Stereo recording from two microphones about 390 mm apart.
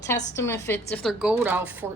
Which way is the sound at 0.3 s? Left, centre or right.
Centre.